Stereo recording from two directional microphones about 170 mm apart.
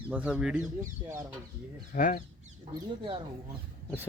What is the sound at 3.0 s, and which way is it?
Speech, 30° right (ahead or behind).